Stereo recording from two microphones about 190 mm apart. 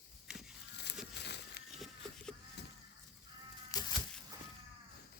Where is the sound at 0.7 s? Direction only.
65° left (ahead or behind).